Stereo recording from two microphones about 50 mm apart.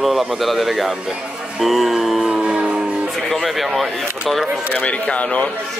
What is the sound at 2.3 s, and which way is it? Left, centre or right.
Music, centre.